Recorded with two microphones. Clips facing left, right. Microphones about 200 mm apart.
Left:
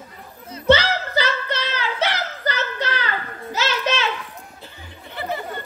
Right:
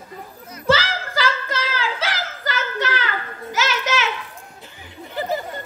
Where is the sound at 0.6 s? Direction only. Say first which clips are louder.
Left 3 dB; 90° right.